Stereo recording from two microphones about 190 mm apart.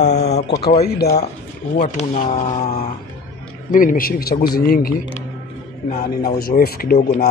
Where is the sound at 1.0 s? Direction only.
60° left (ahead or behind).